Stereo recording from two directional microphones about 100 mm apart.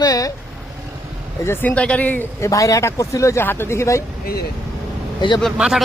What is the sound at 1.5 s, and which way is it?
Speech, 15° left (ahead or behind).